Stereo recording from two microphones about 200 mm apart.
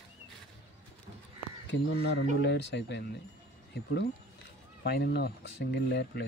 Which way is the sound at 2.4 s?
60° left (ahead or behind).